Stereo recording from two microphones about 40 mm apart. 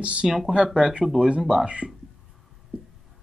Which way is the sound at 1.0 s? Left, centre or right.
Centre.